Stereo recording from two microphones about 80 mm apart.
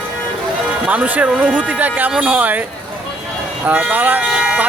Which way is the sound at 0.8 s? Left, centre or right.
Centre.